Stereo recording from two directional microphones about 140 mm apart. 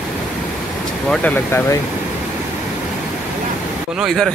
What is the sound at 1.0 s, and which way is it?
Speech, 5° left (ahead or behind).